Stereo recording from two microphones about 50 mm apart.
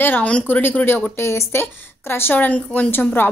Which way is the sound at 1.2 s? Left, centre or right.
Left.